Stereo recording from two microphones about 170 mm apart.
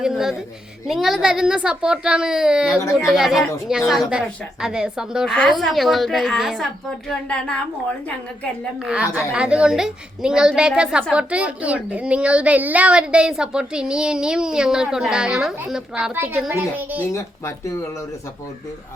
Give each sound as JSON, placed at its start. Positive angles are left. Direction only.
{"t": 0.0, "sound": "a woman's voice", "side_deg": -5}
{"t": 8.8, "sound": "a woman's voice", "side_deg": -5}
{"t": 17.1, "sound": "speech", "side_deg": 15}